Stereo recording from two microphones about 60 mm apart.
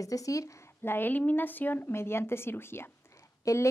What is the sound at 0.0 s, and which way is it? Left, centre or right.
Speech, left.